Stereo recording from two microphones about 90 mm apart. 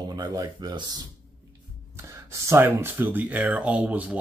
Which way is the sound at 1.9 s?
35° right (ahead or behind).